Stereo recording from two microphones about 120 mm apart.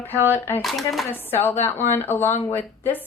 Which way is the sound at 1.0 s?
15° left (ahead or behind).